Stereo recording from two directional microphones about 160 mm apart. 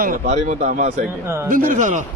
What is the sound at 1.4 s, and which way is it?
Speech, 60° right (ahead or behind).